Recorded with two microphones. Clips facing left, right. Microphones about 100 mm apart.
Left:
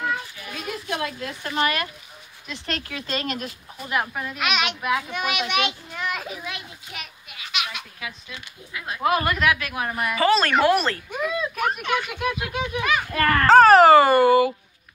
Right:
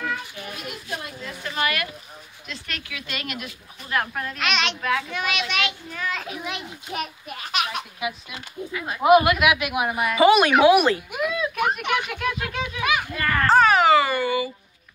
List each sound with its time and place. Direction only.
0.8 s a sound: 85° left
1.4 s speech: 30° left (ahead or behind)
3.9 s a child's voice: 5° left (ahead or behind)
6.9 s a child's voice: 45° right (ahead or behind)
8.0 s speech: 20° right (ahead or behind); by 11.8 s 5° right (ahead or behind)
11.8 s speech: 15° right (ahead or behind)
12.1 s a child's voice: 15° left (ahead or behind)
13.1 s a child's voice: 65° left (ahead or behind)
13.7 s a child's voice: 40° left (ahead or behind)